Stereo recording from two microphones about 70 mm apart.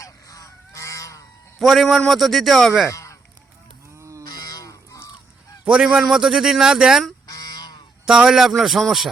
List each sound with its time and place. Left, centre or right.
0.0 s goose: left
1.5 s a man's voice: centre
2.9 s honk: left
3.9 s livestock: right
4.3 s goose: left
5.6 s speech: centre
7.3 s a sound: left
8.0 s a man's voice: centre